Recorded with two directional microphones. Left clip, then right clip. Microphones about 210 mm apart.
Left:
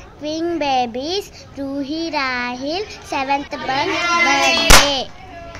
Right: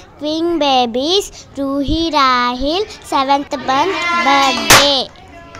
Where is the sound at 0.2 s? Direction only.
25° right (ahead or behind).